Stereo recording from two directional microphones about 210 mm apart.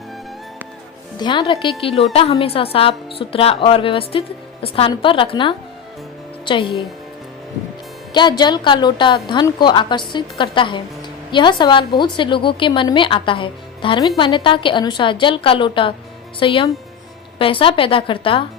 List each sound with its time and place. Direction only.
1.2 s a woman's voice: 20° left (ahead or behind)
8.1 s a woman's voice: 20° left (ahead or behind)